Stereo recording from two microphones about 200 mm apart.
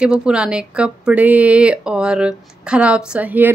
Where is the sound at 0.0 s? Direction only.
5° right (ahead or behind).